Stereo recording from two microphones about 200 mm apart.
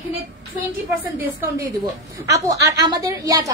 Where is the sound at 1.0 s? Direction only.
10° right (ahead or behind).